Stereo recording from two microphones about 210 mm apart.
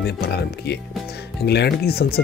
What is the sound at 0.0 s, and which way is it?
Speech, 50° left (ahead or behind).